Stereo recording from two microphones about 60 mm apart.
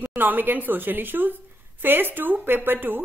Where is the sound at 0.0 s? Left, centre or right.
Right.